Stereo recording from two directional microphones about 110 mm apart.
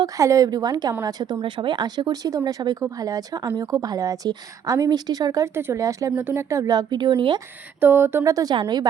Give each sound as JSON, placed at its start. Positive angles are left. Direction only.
{"t": 0.0, "sound": "speech", "side_deg": -30}
{"t": 7.8, "sound": "speech", "side_deg": -20}